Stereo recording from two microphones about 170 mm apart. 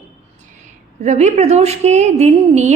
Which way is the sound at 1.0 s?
45° right (ahead or behind).